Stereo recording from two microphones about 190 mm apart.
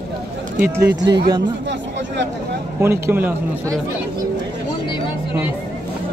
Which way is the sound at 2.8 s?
10° right (ahead or behind).